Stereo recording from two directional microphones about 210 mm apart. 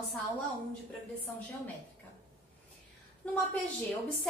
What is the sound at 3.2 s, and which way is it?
Speech, 5° left (ahead or behind).